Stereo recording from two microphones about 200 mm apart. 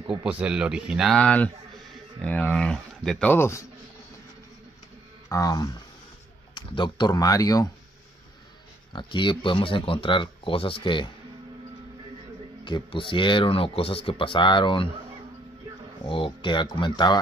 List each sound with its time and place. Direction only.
0.2 s speech: 5° right (ahead or behind); by 3.6 s 15° left (ahead or behind)
5.3 s speech: 15° left (ahead or behind)
8.9 s speech: 25° left (ahead or behind)
12.6 s speech: 25° left (ahead or behind)
16.1 s speech: 25° left (ahead or behind)